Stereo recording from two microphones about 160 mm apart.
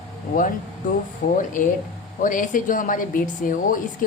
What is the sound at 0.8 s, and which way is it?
A woman's voice, 55° left (ahead or behind).